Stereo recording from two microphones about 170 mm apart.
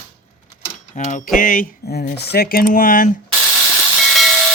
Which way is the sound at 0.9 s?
45° left (ahead or behind).